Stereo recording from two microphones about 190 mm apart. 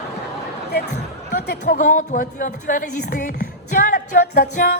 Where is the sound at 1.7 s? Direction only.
45° left (ahead or behind).